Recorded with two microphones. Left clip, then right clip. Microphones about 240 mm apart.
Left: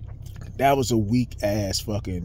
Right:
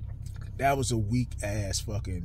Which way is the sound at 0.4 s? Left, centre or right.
Left.